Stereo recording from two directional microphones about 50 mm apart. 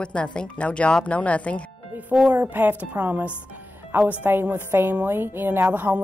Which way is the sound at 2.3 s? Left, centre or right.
Right.